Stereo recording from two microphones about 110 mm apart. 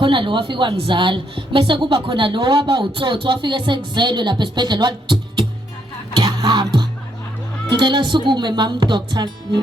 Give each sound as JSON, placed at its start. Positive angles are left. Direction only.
{"t": 0.0, "sound": "a woman's voice", "side_deg": -50}
{"t": 6.1, "sound": "music", "side_deg": -40}
{"t": 7.7, "sound": "a woman's voice", "side_deg": -45}